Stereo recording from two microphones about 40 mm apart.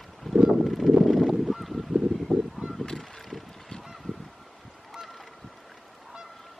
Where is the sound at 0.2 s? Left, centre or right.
Centre.